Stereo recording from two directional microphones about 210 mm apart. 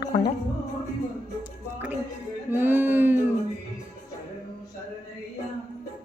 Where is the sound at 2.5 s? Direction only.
10° right (ahead or behind).